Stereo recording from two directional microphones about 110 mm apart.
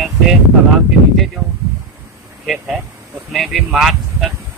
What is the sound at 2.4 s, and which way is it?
Speech, centre (ahead or behind).